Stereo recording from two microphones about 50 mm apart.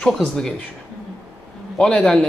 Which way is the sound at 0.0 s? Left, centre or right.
Centre.